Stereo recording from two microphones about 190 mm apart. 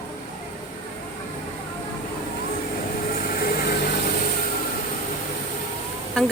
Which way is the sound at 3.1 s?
50° left (ahead or behind).